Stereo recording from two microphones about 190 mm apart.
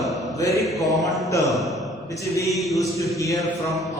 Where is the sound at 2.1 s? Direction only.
15° left (ahead or behind).